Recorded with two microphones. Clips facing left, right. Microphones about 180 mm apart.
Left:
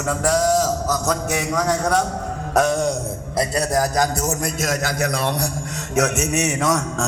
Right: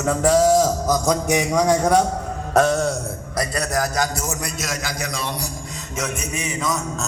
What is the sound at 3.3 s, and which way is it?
A man's voice, 30° left (ahead or behind).